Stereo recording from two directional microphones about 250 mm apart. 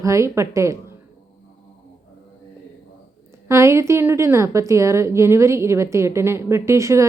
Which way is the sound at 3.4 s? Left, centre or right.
Centre.